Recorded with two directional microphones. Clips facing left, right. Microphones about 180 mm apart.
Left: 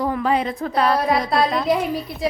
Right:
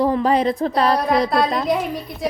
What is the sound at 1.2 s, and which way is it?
Speech, centre (ahead or behind).